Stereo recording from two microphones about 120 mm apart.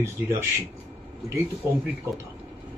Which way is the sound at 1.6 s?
20° right (ahead or behind).